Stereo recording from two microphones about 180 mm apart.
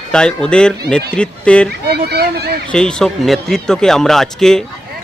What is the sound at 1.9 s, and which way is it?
Speech, 65° right (ahead or behind).